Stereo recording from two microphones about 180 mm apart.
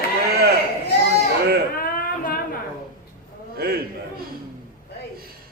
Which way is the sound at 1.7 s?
50° left (ahead or behind).